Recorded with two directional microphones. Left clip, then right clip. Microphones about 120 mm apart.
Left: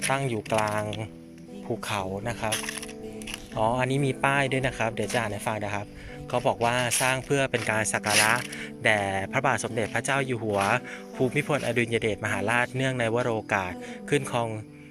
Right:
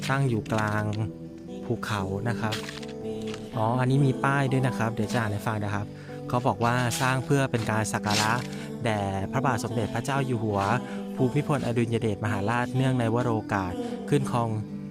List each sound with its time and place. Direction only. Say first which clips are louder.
0.1 s speech: even; 55° right (ahead or behind)
0.6 s a man's voice: left 1 dB; 40° right (ahead or behind)
1.9 s speech: left 2 dB; 60° right (ahead or behind)
3.6 s a man's voice: left 1 dB; 50° right (ahead or behind)